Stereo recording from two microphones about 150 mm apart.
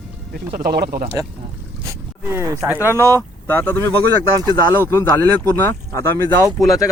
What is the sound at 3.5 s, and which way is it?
Speech, 15° left (ahead or behind).